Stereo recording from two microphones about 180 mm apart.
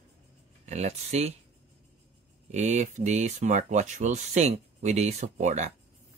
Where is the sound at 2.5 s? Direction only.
40° right (ahead or behind).